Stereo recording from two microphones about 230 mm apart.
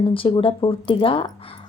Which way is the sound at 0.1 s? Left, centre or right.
Left.